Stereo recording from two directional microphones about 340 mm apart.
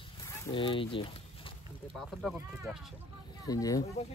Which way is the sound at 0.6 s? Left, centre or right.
Centre.